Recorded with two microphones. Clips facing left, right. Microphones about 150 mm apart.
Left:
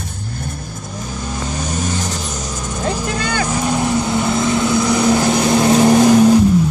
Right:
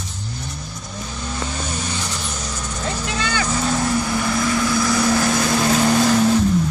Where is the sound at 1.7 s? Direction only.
45° left (ahead or behind).